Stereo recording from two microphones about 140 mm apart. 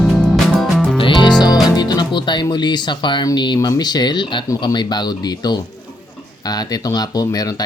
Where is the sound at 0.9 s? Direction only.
35° left (ahead or behind).